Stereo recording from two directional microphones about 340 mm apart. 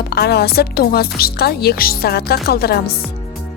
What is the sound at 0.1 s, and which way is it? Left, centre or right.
A woman's voice, left.